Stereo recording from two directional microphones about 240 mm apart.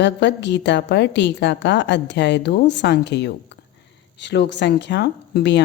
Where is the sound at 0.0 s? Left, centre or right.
Left.